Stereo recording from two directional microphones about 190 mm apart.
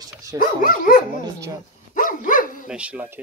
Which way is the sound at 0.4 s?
50° left (ahead or behind).